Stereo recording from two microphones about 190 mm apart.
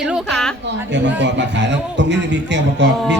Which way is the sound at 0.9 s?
65° right (ahead or behind).